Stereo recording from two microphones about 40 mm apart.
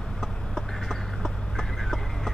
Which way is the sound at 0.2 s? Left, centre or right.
Centre.